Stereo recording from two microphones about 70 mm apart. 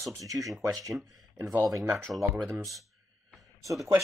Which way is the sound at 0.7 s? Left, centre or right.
Right.